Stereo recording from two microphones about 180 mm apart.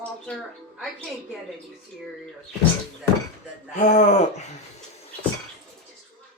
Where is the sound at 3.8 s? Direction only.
40° left (ahead or behind).